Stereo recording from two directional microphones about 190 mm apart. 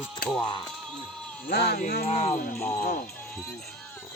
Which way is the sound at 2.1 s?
35° left (ahead or behind).